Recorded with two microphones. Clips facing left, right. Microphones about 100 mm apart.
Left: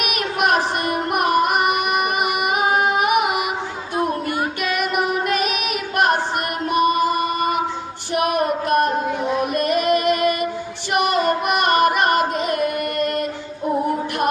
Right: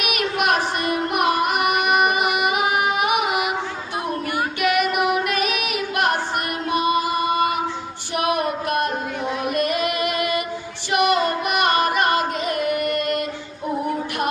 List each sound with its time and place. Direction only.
0.0 s music: 40° left (ahead or behind)
1.7 s music: centre (ahead or behind)
2.3 s music: 45° left (ahead or behind)
10.9 s child singing: 45° left (ahead or behind)